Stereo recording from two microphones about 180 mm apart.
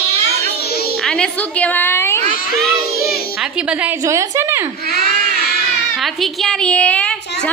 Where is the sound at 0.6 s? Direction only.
60° left (ahead or behind).